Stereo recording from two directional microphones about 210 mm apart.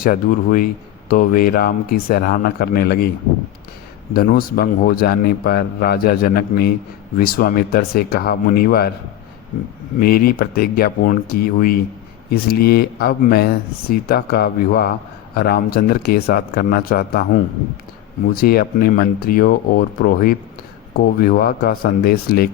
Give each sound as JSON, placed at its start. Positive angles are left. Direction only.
{"t": 0.0, "sound": "a man's voice", "side_deg": 40}
{"t": 4.1, "sound": "a man's voice", "side_deg": 45}
{"t": 10.0, "sound": "a man's voice", "side_deg": 45}
{"t": 18.3, "sound": "a man's voice", "side_deg": 45}